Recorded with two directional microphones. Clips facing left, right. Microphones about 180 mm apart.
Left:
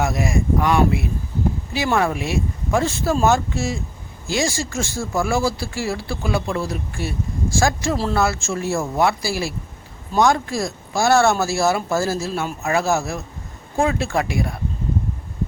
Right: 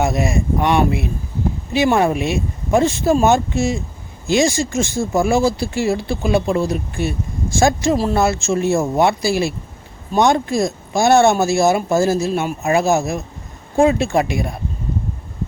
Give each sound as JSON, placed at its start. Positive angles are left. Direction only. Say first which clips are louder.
{"t": 0.0, "sound": "speech", "louder": "right 3 dB", "side_deg": -25}